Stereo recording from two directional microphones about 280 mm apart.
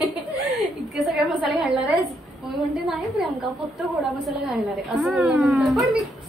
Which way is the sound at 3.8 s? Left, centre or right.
Centre.